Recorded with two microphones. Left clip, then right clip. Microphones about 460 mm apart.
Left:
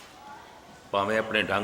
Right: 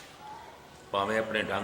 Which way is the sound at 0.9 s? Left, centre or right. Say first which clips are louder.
Left 3 dB; centre.